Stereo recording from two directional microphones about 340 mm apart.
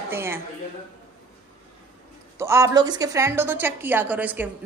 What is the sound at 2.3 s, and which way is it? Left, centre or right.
A woman's voice, centre.